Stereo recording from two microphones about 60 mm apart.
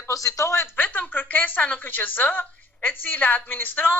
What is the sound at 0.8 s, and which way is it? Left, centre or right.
Speech, left.